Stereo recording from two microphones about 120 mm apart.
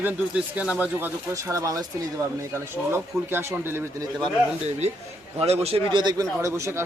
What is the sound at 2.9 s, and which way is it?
Speech, 20° right (ahead or behind).